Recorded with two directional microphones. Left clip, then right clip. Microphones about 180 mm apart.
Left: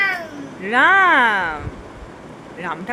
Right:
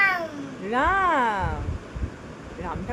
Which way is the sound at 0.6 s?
5° left (ahead or behind).